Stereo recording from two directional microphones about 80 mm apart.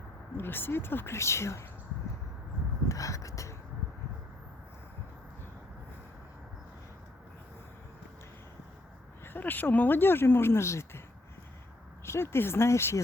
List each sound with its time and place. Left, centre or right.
0.3 s speech: left
2.9 s a sound: left
9.2 s speech: left
12.0 s speech: left